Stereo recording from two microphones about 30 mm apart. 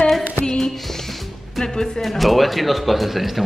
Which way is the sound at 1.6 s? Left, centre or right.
Left.